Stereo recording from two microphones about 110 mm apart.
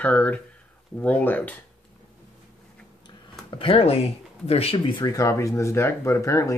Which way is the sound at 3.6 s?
60° left (ahead or behind).